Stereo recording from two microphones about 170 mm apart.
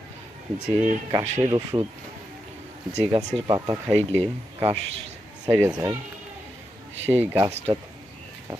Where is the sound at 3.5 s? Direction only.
20° right (ahead or behind).